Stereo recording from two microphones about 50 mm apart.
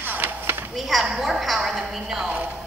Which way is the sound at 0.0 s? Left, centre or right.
Right.